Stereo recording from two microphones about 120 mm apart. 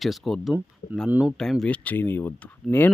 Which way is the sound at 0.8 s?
90° left.